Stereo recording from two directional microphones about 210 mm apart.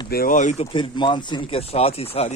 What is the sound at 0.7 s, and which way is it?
Speech, 25° left (ahead or behind).